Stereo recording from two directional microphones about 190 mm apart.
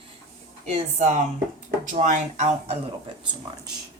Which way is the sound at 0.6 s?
35° right (ahead or behind).